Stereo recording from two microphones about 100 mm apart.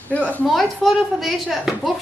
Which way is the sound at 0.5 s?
Centre (ahead or behind).